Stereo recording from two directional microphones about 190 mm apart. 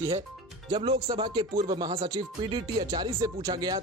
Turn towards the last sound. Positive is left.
turn(degrees=-20)  # may be behind; listen again after turning